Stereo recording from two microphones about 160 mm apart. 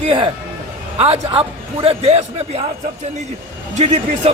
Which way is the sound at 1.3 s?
35° right (ahead or behind).